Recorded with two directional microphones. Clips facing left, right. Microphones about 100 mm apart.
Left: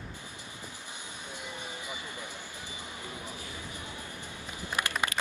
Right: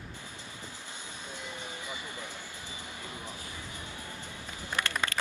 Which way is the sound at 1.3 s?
15° left (ahead or behind).